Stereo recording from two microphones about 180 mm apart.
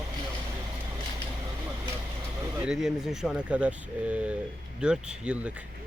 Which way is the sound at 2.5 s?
5° right (ahead or behind).